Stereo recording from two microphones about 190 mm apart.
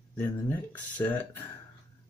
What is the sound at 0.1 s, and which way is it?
Speech, 10° left (ahead or behind).